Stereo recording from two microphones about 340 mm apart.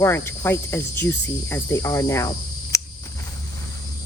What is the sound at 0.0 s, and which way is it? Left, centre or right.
Cricket, centre.